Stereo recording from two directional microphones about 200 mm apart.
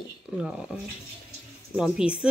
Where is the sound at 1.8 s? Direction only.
5° right (ahead or behind).